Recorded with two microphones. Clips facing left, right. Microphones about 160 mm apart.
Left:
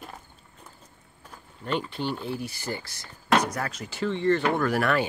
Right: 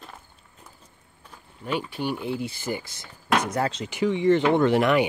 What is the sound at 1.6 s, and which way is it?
Speech, 10° right (ahead or behind).